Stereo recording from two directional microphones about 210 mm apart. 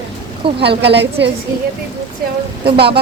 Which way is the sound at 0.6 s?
50° right (ahead or behind).